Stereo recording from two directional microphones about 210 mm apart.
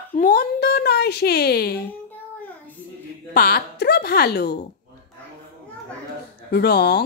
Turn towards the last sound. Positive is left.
turn(degrees=50)  # may be behind; listen again after turning